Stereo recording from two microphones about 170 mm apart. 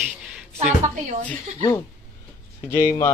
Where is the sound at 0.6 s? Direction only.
40° right (ahead or behind).